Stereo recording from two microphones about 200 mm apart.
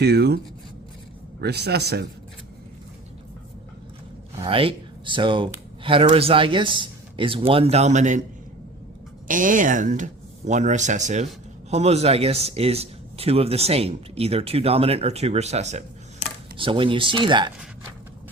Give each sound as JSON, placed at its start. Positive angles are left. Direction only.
{"t": 0.0, "sound": "speech", "side_deg": -55}
{"t": 1.4, "sound": "a man's voice", "side_deg": -55}
{"t": 4.4, "sound": "speech", "side_deg": -25}
{"t": 9.2, "sound": "speech", "side_deg": -40}